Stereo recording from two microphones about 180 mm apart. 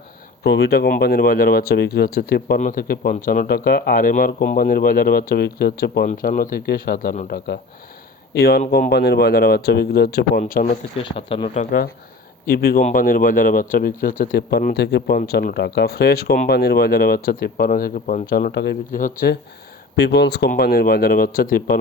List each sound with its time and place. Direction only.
0.4 s speech: 70° left (ahead or behind)
6.1 s speech: 50° left (ahead or behind)
10.9 s speech: 30° left (ahead or behind); by 11.9 s 45° left (ahead or behind)
12.5 s speech: 60° left (ahead or behind)
18.9 s speech: 45° left (ahead or behind)
20.0 s speech: 70° left (ahead or behind)
20.5 s speech: 55° left (ahead or behind)